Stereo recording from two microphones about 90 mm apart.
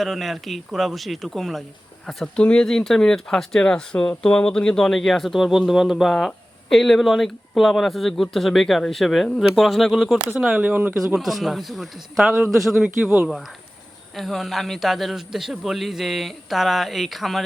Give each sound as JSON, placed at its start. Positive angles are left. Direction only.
{"t": 0.0, "sound": "a man's voice", "side_deg": 0}
{"t": 10.6, "sound": "speech", "side_deg": -20}
{"t": 11.1, "sound": "a man's voice", "side_deg": 0}